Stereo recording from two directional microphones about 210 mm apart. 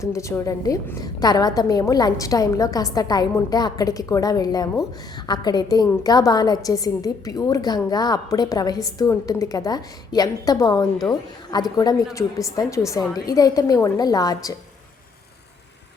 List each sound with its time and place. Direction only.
0.0 s a woman's voice: 15° left (ahead or behind)